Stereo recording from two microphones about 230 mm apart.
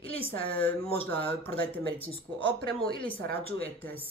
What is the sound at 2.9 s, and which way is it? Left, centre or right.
Speech, left.